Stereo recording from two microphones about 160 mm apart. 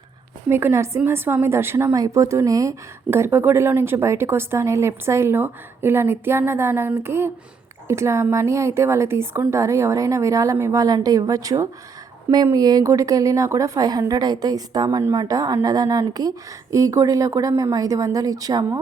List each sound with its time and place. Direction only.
0.4 s a woman's voice: 15° right (ahead or behind)